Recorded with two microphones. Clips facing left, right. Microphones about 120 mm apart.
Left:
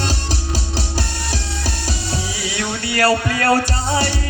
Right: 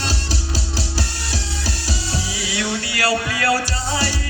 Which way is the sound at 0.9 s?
55° left (ahead or behind).